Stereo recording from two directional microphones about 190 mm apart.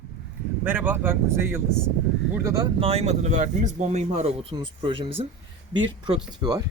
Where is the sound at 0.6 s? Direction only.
10° right (ahead or behind).